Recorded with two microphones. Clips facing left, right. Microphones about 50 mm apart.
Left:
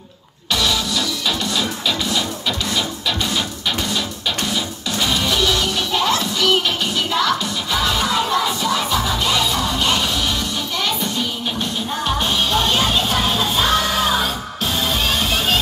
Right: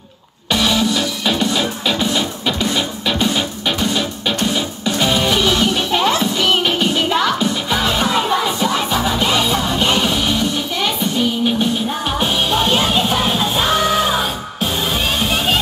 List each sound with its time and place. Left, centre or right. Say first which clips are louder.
0.5 s music: right 4 dB; right; by 15.6 s centre